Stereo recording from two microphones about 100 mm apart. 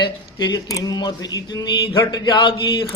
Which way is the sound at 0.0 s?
45° left (ahead or behind).